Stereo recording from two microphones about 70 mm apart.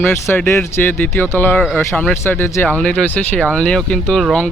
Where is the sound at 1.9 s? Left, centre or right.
Centre.